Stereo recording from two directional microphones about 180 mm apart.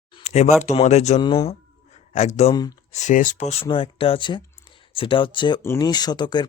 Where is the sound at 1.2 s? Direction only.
30° left (ahead or behind).